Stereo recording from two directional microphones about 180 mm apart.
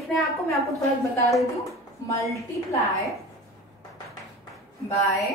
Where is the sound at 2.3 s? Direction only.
15° left (ahead or behind).